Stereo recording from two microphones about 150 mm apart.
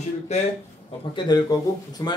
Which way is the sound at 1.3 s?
25° left (ahead or behind).